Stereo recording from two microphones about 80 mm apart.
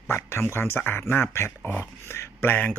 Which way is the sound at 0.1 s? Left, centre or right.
Left.